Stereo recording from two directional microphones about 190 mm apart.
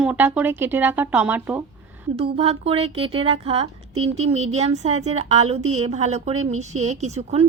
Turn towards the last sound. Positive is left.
turn(degrees=-35)  # may be behind; listen again after turning